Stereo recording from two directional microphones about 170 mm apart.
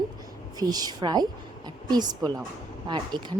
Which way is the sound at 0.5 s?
25° right (ahead or behind).